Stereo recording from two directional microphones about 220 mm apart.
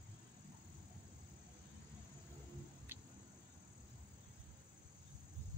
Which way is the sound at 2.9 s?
10° right (ahead or behind).